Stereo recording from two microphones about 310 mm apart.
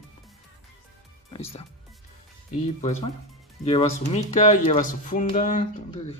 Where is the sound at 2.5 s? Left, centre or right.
Left.